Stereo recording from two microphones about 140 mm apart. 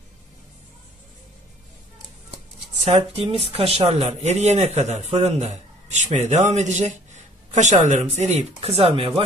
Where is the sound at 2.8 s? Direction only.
50° right (ahead or behind).